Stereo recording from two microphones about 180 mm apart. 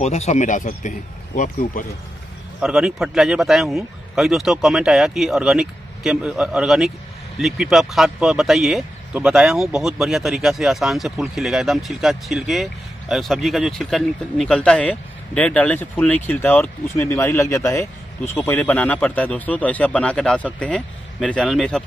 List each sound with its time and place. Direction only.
0.0 s speech: 40° left (ahead or behind)
2.6 s speech: 5° right (ahead or behind)
16.9 s speech: 10° left (ahead or behind)